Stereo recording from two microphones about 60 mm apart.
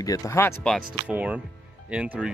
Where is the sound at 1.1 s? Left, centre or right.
Right.